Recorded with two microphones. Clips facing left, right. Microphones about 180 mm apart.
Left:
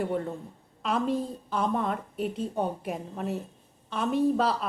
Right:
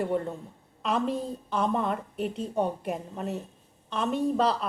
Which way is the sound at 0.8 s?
Centre (ahead or behind).